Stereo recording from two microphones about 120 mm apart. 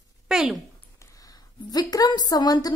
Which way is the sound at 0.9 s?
30° left (ahead or behind).